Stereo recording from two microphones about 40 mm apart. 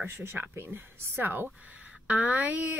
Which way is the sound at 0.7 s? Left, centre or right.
Right.